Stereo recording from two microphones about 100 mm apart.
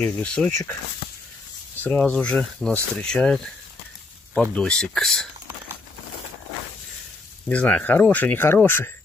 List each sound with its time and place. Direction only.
0.0 s speech: 10° left (ahead or behind)
1.8 s speech: 15° left (ahead or behind)
4.4 s speech: 5° left (ahead or behind)
7.4 s speech: 15° left (ahead or behind)